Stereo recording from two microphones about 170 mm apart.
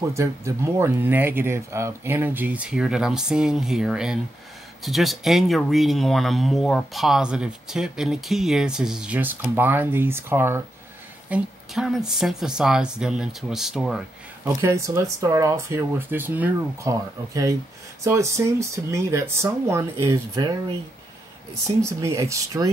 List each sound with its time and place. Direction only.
0.1 s speech: 15° right (ahead or behind)
14.6 s speech: 15° right (ahead or behind)
21.6 s speech: 15° right (ahead or behind)